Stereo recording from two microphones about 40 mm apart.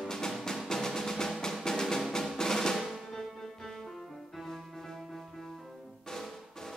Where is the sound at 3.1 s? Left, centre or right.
Centre.